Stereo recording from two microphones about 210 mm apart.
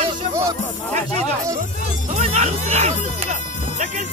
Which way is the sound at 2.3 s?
30° right (ahead or behind).